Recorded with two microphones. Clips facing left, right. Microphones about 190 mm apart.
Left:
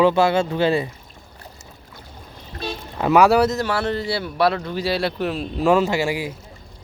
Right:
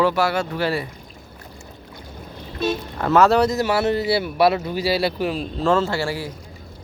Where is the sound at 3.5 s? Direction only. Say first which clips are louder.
Right 3 dB; 10° right (ahead or behind).